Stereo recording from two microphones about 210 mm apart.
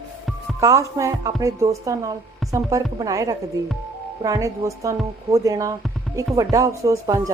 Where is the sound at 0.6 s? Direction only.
15° right (ahead or behind).